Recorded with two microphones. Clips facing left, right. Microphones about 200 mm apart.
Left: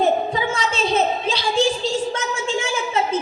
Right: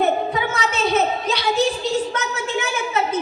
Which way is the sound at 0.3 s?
30° left (ahead or behind).